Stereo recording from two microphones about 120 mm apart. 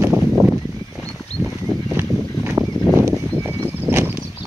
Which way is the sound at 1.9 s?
20° right (ahead or behind).